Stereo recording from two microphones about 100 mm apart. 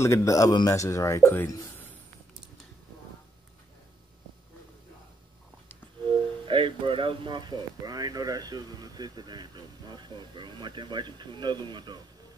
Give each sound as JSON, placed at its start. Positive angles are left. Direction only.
{"t": 0.0, "sound": "speech", "side_deg": 30}
{"t": 6.4, "sound": "speech", "side_deg": -60}